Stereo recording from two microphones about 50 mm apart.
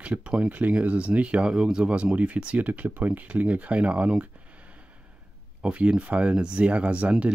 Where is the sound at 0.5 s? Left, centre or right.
Right.